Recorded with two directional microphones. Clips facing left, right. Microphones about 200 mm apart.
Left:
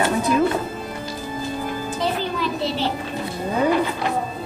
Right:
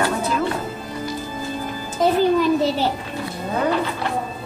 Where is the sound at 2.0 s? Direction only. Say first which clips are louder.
Right 9 dB; 45° right (ahead or behind).